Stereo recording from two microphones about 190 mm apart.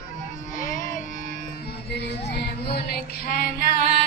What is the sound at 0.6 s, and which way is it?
Music, 45° left (ahead or behind).